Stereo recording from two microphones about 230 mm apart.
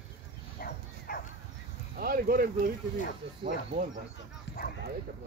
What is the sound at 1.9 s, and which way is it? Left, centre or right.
Speech, right.